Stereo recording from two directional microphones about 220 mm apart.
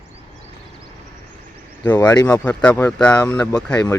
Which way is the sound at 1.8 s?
15° left (ahead or behind).